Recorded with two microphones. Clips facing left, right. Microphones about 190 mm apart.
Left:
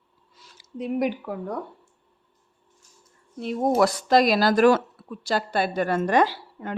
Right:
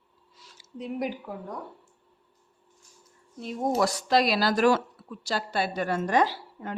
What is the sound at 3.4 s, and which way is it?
A woman's voice, 65° left (ahead or behind).